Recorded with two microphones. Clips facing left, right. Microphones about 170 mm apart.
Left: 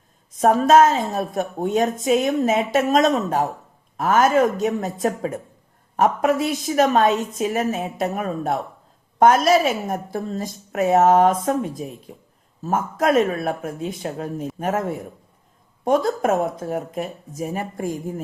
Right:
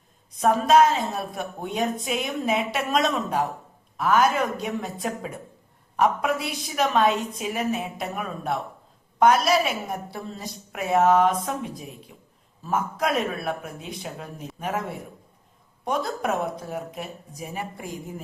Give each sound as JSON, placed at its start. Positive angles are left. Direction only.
{"t": 0.3, "sound": "a woman's voice", "side_deg": 45}